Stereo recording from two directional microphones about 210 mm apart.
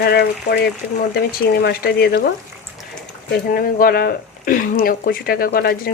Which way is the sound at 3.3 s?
45° left (ahead or behind).